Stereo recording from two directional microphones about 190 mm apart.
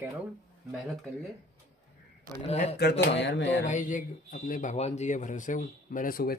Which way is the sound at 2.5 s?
35° left (ahead or behind).